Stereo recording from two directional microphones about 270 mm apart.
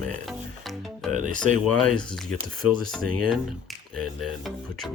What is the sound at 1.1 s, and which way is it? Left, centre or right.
Speech, right.